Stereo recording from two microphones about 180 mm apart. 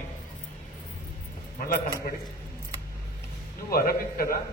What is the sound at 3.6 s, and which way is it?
Speech, 55° left (ahead or behind).